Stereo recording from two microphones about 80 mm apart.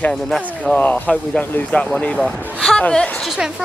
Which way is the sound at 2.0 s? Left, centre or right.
Centre.